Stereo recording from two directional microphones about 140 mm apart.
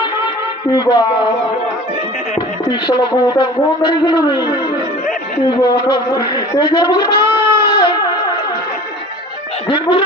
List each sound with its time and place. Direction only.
0.0 s a sound: 30° left (ahead or behind)
2.7 s a man's voice: 35° left (ahead or behind)
5.6 s a man's voice: 30° left (ahead or behind)
7.2 s goat: 20° right (ahead or behind)
7.6 s a sound: 30° left (ahead or behind)
9.7 s a man's voice: 40° left (ahead or behind)